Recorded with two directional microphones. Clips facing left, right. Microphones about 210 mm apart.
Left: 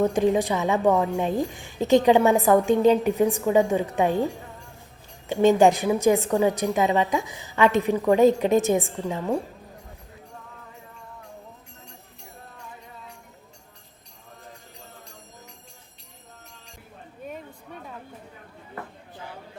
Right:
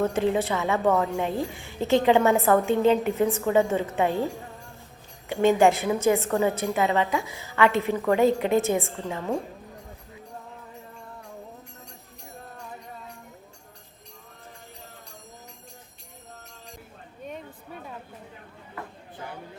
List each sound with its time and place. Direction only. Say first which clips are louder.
0.0 s a woman's voice: left 3 dB; 15° left (ahead or behind)
5.3 s a woman's voice: left 2 dB; 20° left (ahead or behind)